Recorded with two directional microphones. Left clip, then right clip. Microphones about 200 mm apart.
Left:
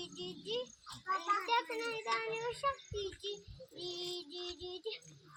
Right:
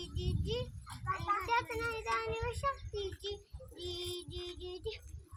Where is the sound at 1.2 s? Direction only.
40° right (ahead or behind).